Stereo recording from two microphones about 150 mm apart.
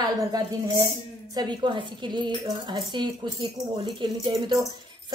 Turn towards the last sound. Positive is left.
turn(degrees=-30)  # may be behind; listen again after turning